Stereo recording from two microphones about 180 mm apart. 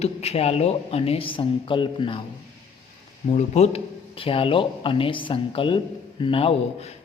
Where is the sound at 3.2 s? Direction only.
40° left (ahead or behind).